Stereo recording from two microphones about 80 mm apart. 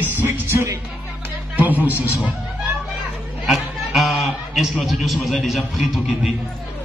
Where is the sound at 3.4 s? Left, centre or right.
Centre.